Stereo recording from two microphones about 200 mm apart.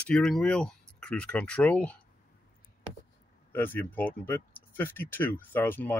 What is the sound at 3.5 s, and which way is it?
Speech, 10° left (ahead or behind).